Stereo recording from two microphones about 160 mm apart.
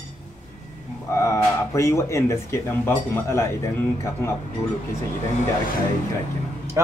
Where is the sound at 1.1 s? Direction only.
20° left (ahead or behind).